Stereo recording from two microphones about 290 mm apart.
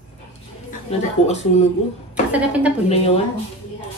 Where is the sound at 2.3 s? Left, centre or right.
Centre.